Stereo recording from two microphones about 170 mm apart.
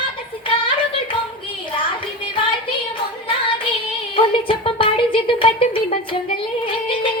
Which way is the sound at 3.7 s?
30° left (ahead or behind).